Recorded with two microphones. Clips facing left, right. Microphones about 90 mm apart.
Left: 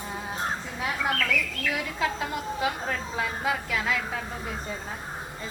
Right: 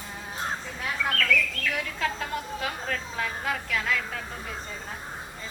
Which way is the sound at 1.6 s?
10° left (ahead or behind).